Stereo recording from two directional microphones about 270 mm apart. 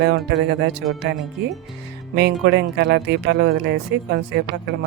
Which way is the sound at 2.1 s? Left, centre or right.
Right.